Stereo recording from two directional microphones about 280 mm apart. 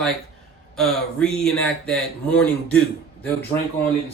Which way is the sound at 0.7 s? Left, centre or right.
Centre.